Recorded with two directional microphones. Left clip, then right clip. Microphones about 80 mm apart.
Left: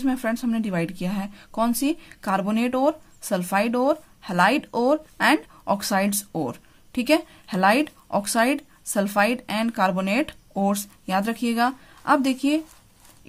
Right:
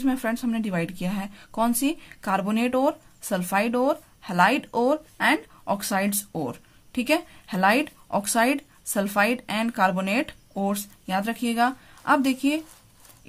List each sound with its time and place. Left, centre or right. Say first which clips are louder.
0.0 s a woman's voice: left 1 dB; centre
5.1 s speech: left 2 dB; left; by 10.2 s centre
10.5 s speech: left 4 dB; left
11.4 s a woman's voice: even; left